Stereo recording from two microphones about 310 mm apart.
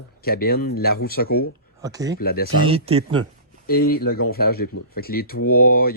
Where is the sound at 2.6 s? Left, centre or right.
Centre.